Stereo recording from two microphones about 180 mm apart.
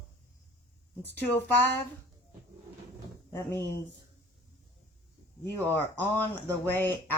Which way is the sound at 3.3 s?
15° left (ahead or behind).